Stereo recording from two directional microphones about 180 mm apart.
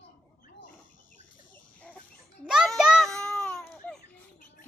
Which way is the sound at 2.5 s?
Centre (ahead or behind).